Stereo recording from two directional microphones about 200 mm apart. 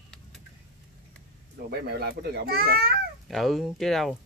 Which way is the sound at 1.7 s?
50° right (ahead or behind).